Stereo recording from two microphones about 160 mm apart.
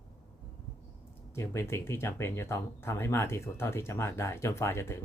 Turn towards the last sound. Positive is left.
turn(degrees=15)  # may be behind; listen again after turning